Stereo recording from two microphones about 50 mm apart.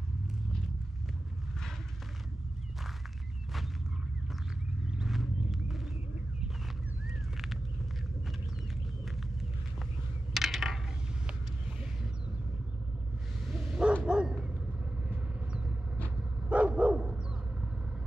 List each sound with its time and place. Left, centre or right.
5.0 s vehicle: centre
10.3 s coin: centre
13.6 s bow-wow: centre
14.0 s dog: centre
16.2 s dog: right